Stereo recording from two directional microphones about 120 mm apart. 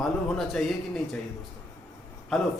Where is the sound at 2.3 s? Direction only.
Centre (ahead or behind).